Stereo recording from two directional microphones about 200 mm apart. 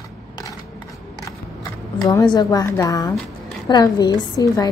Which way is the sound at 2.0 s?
20° left (ahead or behind).